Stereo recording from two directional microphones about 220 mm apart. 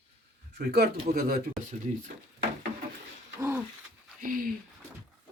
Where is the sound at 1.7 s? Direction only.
35° right (ahead or behind).